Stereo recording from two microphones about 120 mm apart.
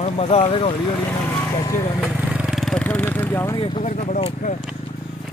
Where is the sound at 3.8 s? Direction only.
85° left.